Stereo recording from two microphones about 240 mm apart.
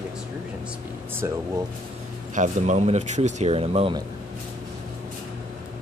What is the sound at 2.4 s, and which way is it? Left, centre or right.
Speech, right.